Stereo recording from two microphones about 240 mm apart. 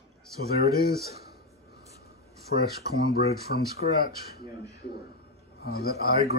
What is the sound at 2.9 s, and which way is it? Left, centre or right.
Speech, left.